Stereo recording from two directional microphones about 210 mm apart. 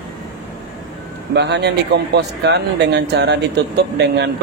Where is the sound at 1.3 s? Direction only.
55° right (ahead or behind).